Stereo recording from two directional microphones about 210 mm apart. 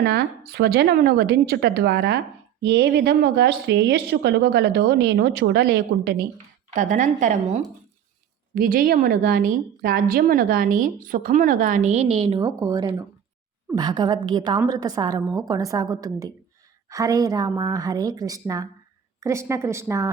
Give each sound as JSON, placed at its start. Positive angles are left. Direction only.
{"t": 0.0, "sound": "speech", "side_deg": -50}
{"t": 6.7, "sound": "a woman's voice", "side_deg": -35}